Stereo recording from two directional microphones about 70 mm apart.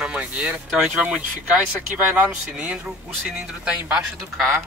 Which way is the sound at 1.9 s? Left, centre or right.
Right.